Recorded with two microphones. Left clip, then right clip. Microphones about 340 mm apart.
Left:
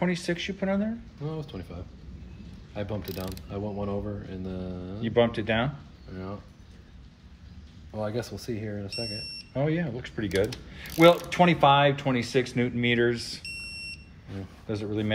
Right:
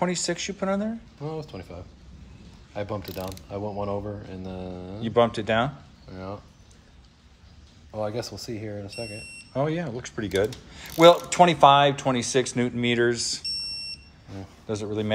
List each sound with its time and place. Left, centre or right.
0.0 s speech: centre
7.9 s speech: centre
14.7 s speech: centre